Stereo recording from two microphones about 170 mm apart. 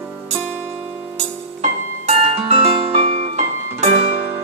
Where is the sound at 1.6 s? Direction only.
40° right (ahead or behind).